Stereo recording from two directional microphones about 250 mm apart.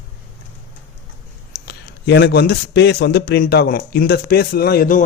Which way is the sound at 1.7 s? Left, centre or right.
Left.